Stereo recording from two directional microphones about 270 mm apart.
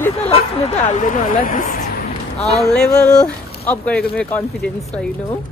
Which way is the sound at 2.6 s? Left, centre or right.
Centre.